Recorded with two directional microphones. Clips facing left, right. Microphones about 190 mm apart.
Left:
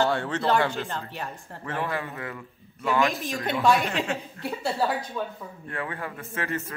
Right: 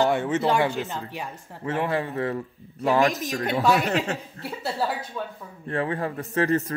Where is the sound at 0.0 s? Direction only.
20° right (ahead or behind).